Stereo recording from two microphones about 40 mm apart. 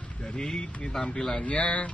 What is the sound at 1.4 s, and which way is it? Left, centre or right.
Speech, left.